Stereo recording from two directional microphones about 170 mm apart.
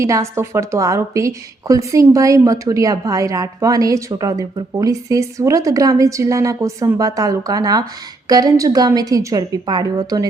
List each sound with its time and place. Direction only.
0.0 s a woman's voice: 15° right (ahead or behind)